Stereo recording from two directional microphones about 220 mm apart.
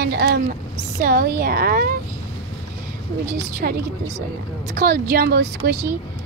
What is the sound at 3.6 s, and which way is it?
A woman's voice, 40° right (ahead or behind).